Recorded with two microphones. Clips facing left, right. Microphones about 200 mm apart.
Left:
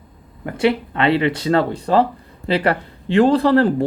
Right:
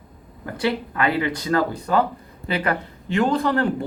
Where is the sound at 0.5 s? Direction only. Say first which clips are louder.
Left 5 dB; 25° left (ahead or behind).